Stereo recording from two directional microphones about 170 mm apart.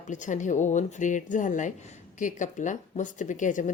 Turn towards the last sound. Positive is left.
turn(degrees=50)  # may be behind; listen again after turning